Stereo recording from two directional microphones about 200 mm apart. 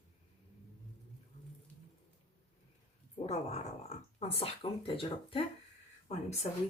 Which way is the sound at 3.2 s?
30° left (ahead or behind).